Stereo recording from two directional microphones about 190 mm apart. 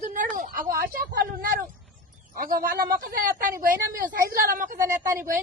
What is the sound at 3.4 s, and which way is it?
A woman's voice, 45° right (ahead or behind).